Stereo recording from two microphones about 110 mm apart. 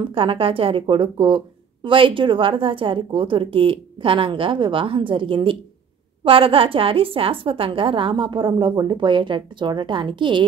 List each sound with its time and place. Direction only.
0.0 s speech: 55° right (ahead or behind)